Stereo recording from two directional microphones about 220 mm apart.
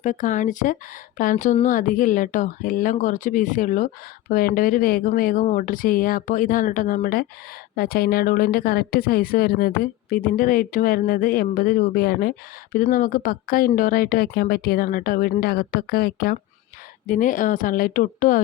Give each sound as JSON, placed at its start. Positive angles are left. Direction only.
{"t": 0.0, "sound": "a woman's voice", "side_deg": 35}